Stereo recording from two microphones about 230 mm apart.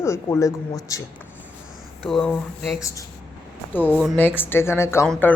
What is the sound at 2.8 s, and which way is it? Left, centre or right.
Speech, centre.